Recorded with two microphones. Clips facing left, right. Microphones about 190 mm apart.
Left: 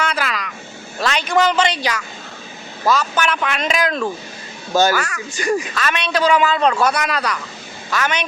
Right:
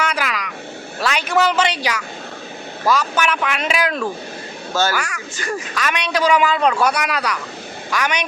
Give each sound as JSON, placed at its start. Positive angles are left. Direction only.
{"t": 0.0, "sound": "a sound", "side_deg": -10}
{"t": 0.9, "sound": "a man's voice", "side_deg": -10}
{"t": 4.7, "sound": "speech", "side_deg": 15}
{"t": 4.9, "sound": "a man's voice", "side_deg": -10}
{"t": 5.4, "sound": "speech", "side_deg": 15}
{"t": 5.7, "sound": "a man's voice", "side_deg": -10}